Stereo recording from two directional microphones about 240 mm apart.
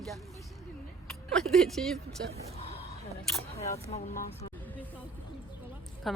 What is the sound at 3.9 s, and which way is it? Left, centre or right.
Speech, left.